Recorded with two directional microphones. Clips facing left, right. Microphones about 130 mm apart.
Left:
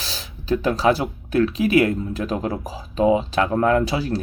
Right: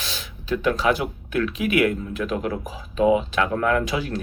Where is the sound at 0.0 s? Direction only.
35° left (ahead or behind).